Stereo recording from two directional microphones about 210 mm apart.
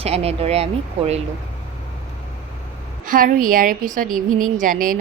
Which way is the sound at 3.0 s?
40° right (ahead or behind).